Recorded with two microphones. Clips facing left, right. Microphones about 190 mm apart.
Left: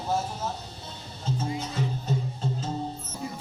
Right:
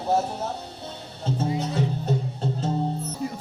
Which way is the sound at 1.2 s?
65° right (ahead or behind).